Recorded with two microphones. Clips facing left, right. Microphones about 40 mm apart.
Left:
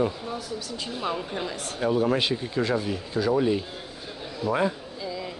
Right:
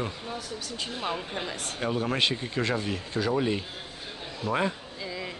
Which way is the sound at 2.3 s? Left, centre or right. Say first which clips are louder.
Left 3 dB; centre.